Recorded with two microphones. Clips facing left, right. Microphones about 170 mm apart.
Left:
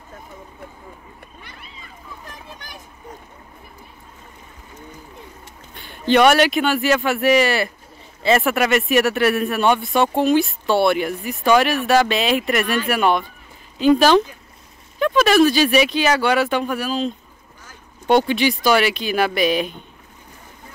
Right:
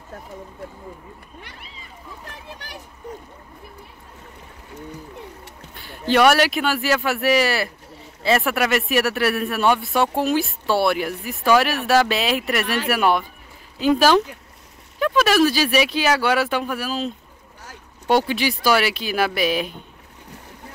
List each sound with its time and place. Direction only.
2.2 s speech: 70° right (ahead or behind)
5.8 s speech: 5° right (ahead or behind)